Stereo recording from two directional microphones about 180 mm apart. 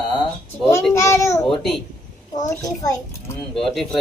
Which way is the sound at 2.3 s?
20° left (ahead or behind).